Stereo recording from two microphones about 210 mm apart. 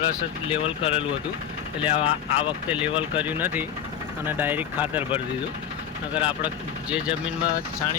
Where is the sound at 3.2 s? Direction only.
10° right (ahead or behind).